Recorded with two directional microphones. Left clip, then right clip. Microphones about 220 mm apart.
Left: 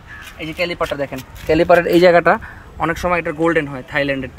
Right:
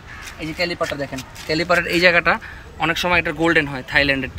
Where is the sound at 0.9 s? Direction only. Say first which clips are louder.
Left 3 dB; 30° left (ahead or behind).